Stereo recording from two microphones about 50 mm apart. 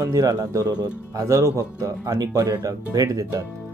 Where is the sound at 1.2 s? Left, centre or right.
Right.